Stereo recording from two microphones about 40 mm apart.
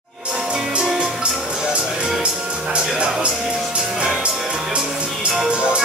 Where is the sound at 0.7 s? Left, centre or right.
Right.